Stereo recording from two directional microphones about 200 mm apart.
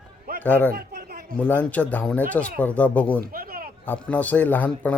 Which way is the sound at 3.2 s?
50° right (ahead or behind).